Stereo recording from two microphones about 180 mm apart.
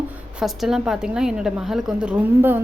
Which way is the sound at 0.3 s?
Centre (ahead or behind).